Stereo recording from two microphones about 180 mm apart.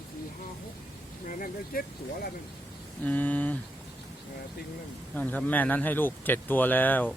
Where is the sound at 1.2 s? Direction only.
50° left (ahead or behind).